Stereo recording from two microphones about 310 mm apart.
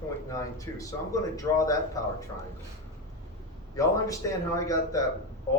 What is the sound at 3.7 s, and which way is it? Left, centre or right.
A man's voice, centre.